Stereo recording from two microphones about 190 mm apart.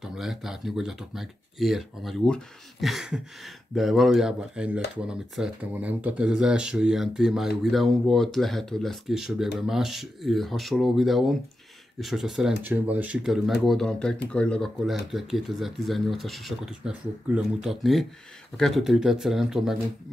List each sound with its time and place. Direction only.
0.0 s speech: centre (ahead or behind)